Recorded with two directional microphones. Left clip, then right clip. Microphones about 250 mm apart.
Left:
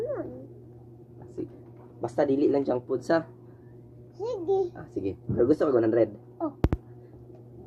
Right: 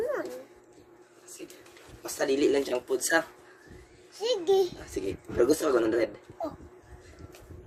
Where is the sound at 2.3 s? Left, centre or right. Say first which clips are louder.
Right 3 dB; right.